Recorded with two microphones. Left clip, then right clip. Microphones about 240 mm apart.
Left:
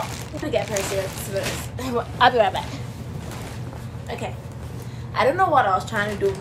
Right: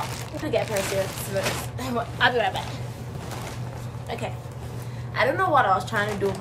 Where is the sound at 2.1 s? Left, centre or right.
Centre.